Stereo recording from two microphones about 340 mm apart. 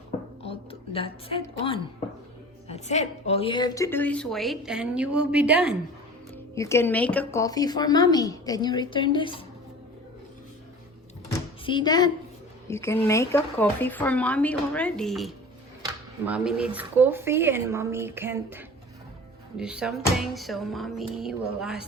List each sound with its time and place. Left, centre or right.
0.4 s a woman's voice: centre
6.3 s speech: centre
11.3 s a sound: centre
12.6 s a woman's voice: centre